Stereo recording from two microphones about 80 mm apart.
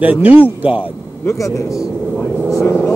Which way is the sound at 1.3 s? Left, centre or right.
Left.